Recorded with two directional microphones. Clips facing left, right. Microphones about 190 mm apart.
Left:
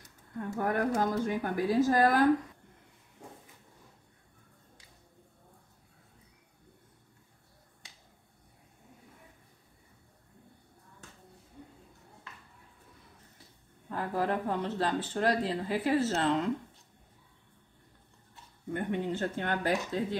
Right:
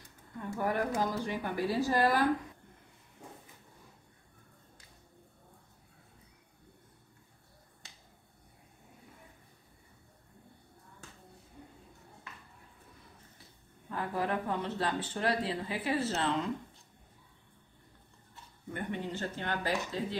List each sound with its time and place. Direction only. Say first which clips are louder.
0.7 s speech: left 3 dB; 50° left (ahead or behind)
13.8 s speech: left 3 dB; 40° left (ahead or behind)
18.7 s speech: left 5 dB; 50° left (ahead or behind)